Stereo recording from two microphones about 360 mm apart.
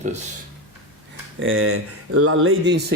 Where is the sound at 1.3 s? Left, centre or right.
Right.